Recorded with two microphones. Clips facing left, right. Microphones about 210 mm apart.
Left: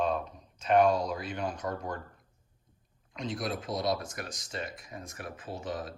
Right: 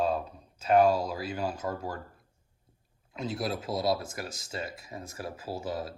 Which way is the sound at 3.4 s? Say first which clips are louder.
Right 2 dB; 25° right (ahead or behind).